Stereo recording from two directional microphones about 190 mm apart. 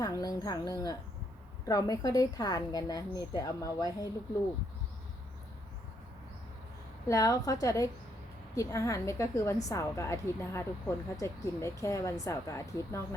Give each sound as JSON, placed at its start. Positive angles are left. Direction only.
{"t": 0.0, "sound": "a woman's voice", "side_deg": 20}
{"t": 7.1, "sound": "a woman's voice", "side_deg": 20}